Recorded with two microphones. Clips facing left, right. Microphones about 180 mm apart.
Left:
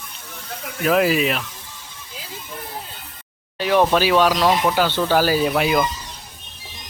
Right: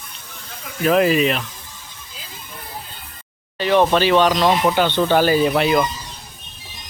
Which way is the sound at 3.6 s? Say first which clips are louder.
Right 1 dB; 5° left (ahead or behind).